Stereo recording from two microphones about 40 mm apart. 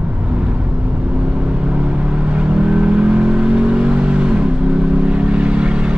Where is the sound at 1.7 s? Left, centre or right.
Right.